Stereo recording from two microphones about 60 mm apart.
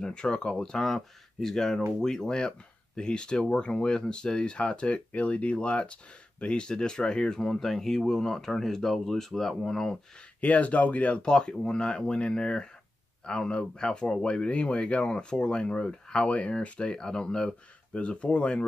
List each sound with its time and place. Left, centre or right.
0.0 s speech: centre
10.4 s speech: left